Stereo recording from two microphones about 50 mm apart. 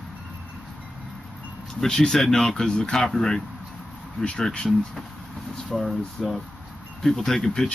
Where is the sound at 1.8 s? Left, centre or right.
Centre.